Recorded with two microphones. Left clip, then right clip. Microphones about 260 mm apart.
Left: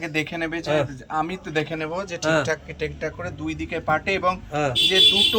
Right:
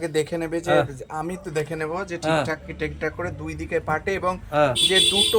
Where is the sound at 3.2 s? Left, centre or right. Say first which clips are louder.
Even; centre.